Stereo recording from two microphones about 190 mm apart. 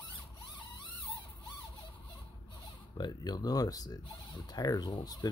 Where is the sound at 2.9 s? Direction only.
20° left (ahead or behind).